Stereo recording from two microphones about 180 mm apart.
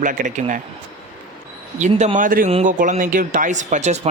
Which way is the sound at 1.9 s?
30° right (ahead or behind).